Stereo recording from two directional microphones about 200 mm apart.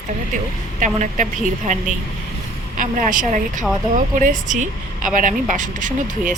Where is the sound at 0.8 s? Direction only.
40° right (ahead or behind).